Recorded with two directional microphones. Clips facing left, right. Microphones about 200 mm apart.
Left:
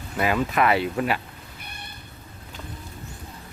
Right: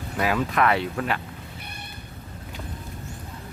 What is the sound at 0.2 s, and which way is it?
Speech, 5° left (ahead or behind).